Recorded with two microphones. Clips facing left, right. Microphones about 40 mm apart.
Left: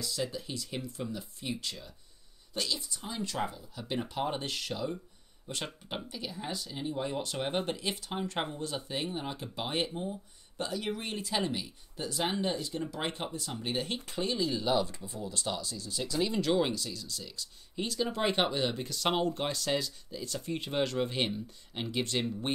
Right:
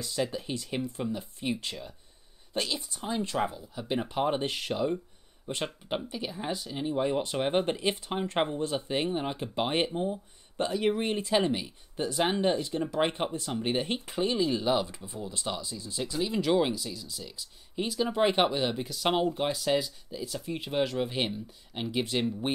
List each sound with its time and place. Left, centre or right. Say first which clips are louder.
0.0 s speech: right 4 dB; right
16.2 s speech: right 2 dB; centre